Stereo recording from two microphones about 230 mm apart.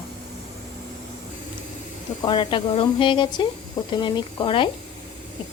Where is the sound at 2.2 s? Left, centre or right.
Centre.